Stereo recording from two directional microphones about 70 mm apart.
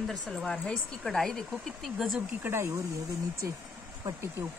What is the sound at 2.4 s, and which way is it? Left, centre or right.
Speech, right.